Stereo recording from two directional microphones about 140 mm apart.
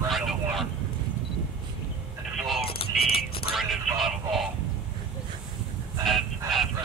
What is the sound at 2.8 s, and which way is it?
Music, 40° left (ahead or behind).